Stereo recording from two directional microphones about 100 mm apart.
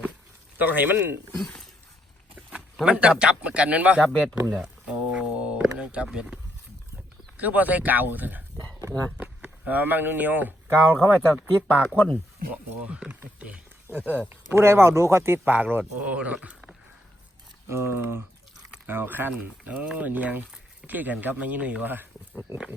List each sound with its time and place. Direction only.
0.6 s speech: 20° right (ahead or behind)
2.8 s speech: 10° right (ahead or behind)
4.4 s a sound: 10° right (ahead or behind)
7.3 s speech: 15° right (ahead or behind)
8.8 s speech: 30° right (ahead or behind)
9.1 s speech: 15° right (ahead or behind)
10.9 s speech: 5° left (ahead or behind)
11.3 s speech: 10° right (ahead or behind)
17.7 s speech: 25° right (ahead or behind)